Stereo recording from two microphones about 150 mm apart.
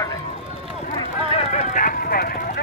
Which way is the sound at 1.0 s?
40° left (ahead or behind).